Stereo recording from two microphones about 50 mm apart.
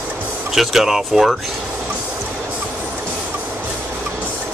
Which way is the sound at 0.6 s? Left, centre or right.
Centre.